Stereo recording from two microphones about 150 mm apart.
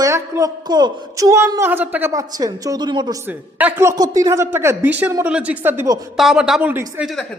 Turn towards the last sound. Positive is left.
turn(degrees=-10)  # may be behind; listen again after turning